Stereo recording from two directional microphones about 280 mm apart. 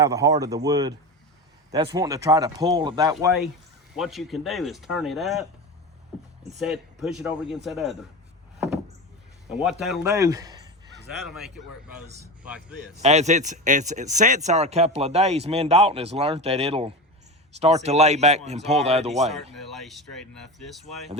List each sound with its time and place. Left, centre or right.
0.0 s speech: centre
3.9 s speech: centre
6.6 s speech: centre
9.5 s speech: centre
11.3 s speech: centre
13.0 s speech: right
19.5 s speech: centre